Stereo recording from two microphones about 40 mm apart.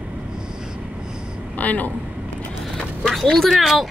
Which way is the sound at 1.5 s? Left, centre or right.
Left.